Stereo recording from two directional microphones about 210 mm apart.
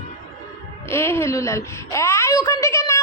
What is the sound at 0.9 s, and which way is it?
A woman's voice, 10° left (ahead or behind).